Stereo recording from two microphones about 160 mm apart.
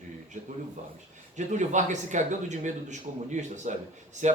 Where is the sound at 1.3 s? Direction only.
50° right (ahead or behind).